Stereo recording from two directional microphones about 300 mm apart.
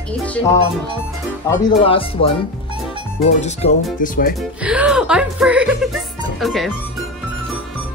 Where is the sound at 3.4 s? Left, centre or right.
Left.